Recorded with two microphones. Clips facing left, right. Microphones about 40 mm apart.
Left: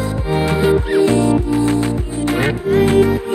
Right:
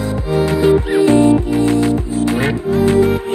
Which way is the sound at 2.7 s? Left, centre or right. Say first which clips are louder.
Left 4 dB; left.